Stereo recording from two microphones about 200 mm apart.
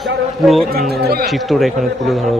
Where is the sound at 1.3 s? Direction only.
Centre (ahead or behind).